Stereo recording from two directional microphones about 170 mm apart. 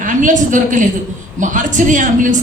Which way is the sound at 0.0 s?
50° right (ahead or behind).